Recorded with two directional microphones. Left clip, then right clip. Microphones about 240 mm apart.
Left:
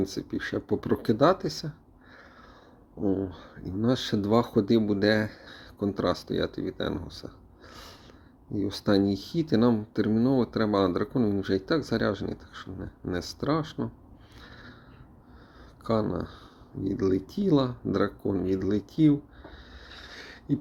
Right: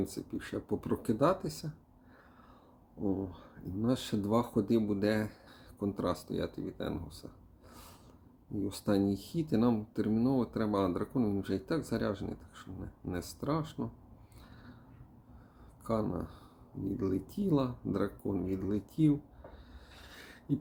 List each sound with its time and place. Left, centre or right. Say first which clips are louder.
0.0 s speech: left 8 dB; centre
3.0 s speech: left 7 dB; centre
7.7 s snort: left 8 dB; centre
8.5 s speech: left 7 dB; centre
14.4 s a sound: left 9 dB; left
15.8 s speech: left 7 dB; centre
19.9 s a sound: left 8 dB; centre